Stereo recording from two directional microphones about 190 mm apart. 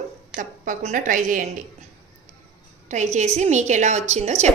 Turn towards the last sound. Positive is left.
turn(degrees=-35)  # may be behind; listen again after turning